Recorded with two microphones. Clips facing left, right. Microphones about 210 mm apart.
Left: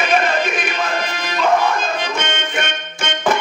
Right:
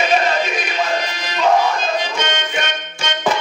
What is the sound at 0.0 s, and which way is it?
Music, 50° left (ahead or behind).